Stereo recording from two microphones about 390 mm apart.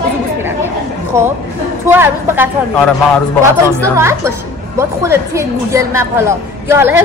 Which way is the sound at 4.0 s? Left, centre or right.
Centre.